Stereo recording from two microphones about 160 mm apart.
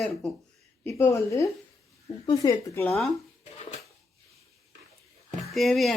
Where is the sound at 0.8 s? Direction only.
15° left (ahead or behind).